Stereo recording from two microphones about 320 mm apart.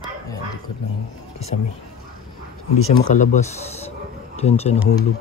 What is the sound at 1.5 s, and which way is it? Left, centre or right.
Speech, left.